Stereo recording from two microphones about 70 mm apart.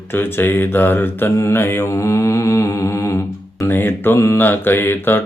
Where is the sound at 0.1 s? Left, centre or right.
Left.